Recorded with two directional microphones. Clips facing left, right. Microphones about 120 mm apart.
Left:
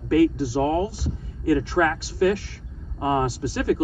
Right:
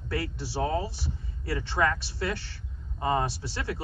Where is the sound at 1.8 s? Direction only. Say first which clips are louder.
Left 3 dB; 55° left (ahead or behind).